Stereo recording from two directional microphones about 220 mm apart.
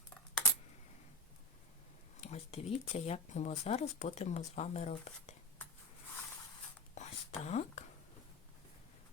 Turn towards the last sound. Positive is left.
turn(degrees=30)  # may be behind; listen again after turning